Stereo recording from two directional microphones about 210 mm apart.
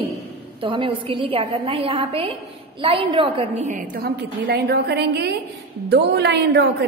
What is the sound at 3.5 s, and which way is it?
A woman's voice, 40° right (ahead or behind).